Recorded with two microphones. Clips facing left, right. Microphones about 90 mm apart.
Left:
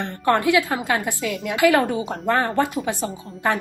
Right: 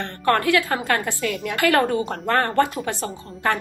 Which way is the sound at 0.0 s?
15° left (ahead or behind).